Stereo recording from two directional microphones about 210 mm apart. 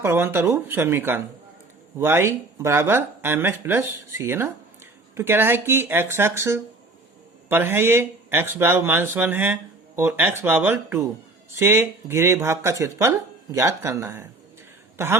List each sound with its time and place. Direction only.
0.0 s speech: 10° right (ahead or behind)